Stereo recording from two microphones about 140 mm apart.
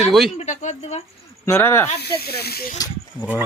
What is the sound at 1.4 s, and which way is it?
Speech, 20° left (ahead or behind).